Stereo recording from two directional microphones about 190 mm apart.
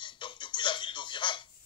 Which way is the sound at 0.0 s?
25° left (ahead or behind).